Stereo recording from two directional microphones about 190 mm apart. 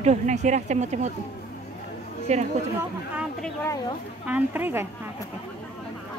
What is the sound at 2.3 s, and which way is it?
Speech, 35° right (ahead or behind).